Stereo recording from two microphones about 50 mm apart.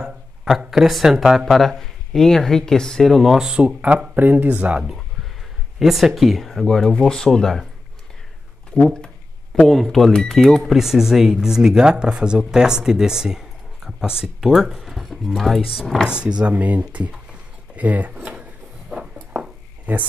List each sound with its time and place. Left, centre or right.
0.7 s speech: centre
3.4 s speech: right
4.5 s speech: right
5.8 s speech: centre
8.8 s speech: centre
16.1 s speech: right
17.1 s a sound: right
18.2 s drawer open or close: right
19.9 s speech: right